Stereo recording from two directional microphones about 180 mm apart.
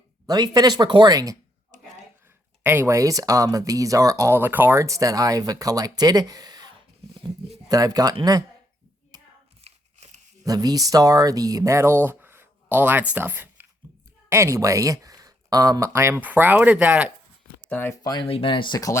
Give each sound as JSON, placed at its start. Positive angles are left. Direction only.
{"t": 0.3, "sound": "speech", "side_deg": -20}
{"t": 2.6, "sound": "speech", "side_deg": -15}
{"t": 9.6, "sound": "a sound", "side_deg": -35}
{"t": 10.4, "sound": "speech", "side_deg": -20}
{"t": 17.7, "sound": "speech", "side_deg": 10}